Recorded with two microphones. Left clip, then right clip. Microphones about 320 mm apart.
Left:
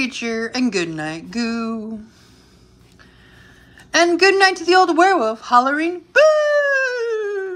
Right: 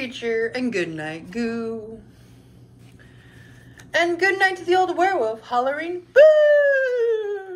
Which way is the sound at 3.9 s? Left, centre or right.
Centre.